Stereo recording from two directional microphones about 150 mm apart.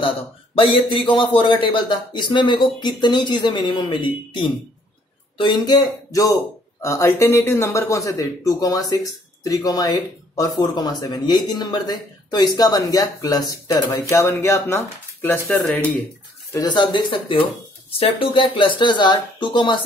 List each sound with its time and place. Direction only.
0.6 s a man's voice: 35° left (ahead or behind); by 15.9 s 10° left (ahead or behind)
16.5 s a man's voice: 30° left (ahead or behind)